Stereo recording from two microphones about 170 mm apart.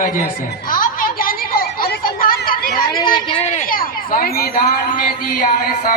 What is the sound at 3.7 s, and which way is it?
Speech, 60° left (ahead or behind).